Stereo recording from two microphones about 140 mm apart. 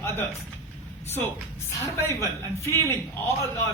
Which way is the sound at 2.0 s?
15° left (ahead or behind).